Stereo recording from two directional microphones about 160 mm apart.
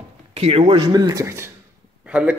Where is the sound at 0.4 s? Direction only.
40° right (ahead or behind).